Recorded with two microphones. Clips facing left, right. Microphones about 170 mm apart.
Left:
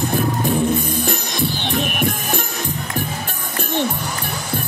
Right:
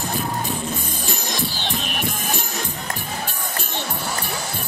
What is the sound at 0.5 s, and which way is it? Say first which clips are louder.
Music: left 9 dB; 55° left (ahead or behind).